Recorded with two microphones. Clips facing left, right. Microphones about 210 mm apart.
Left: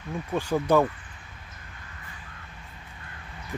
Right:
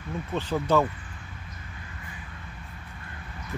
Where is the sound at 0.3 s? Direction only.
10° left (ahead or behind).